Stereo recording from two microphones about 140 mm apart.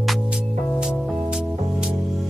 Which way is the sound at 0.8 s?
5° right (ahead or behind).